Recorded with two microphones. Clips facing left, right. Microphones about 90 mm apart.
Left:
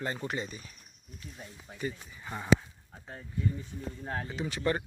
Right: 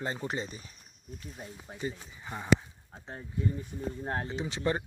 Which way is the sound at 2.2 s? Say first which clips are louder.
Even; 10° right (ahead or behind).